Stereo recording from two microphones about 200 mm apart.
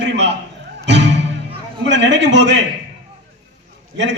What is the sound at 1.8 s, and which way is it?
Speech, 65° right (ahead or behind).